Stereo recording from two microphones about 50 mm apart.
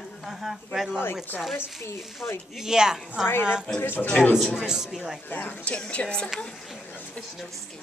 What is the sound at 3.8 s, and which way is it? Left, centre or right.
Speech, left.